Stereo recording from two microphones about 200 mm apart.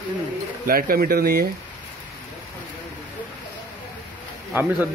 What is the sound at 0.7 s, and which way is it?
Speech, 45° right (ahead or behind).